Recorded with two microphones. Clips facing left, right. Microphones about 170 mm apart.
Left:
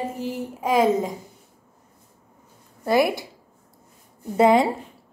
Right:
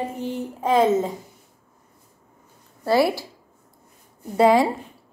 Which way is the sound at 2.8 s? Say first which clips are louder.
Right 1 dB; 20° left (ahead or behind).